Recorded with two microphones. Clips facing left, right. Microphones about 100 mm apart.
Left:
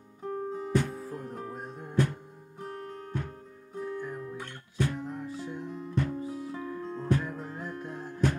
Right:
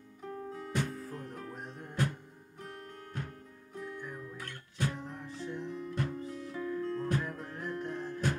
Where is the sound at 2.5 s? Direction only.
30° left (ahead or behind).